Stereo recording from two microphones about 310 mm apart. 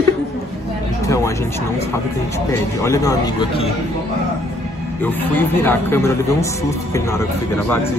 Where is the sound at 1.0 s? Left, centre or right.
Centre.